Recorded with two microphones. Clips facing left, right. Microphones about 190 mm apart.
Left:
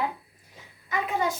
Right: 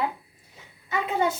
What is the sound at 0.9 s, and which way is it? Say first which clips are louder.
Speech: right 2 dB; 25° right (ahead or behind).